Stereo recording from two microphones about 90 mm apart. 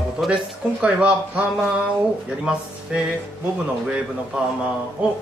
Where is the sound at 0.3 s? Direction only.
10° right (ahead or behind).